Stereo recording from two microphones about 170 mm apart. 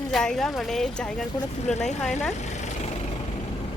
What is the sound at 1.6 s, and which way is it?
Speech, 40° left (ahead or behind).